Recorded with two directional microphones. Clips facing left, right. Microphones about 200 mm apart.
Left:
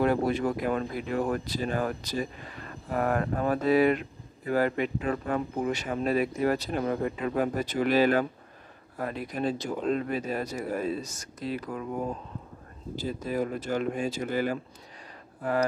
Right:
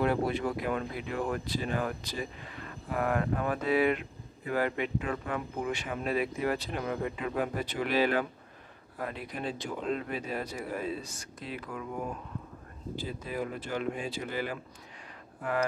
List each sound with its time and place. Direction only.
0.0 s speech: 45° left (ahead or behind)
12.9 s speech: 40° left (ahead or behind)